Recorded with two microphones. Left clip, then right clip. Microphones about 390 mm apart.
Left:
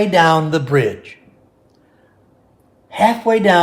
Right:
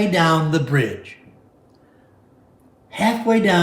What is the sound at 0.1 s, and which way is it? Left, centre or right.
Speech, centre.